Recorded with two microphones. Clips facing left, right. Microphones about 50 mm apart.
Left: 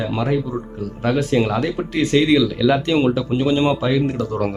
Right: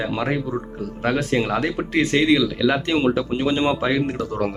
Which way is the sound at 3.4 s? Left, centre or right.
Right.